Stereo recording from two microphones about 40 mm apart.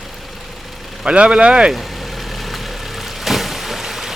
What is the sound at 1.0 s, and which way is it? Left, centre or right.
Speech, right.